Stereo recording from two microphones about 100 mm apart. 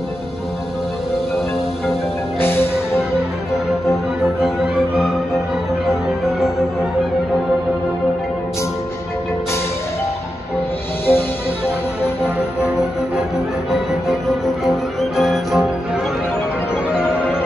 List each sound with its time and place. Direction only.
2.4 s music: 20° left (ahead or behind)
3.9 s music: 5° right (ahead or behind)
11.1 s music: 20° left (ahead or behind)
13.7 s music: centre (ahead or behind)
16.7 s music: 10° right (ahead or behind)